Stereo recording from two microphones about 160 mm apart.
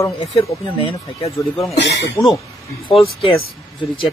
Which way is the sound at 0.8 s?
35° left (ahead or behind).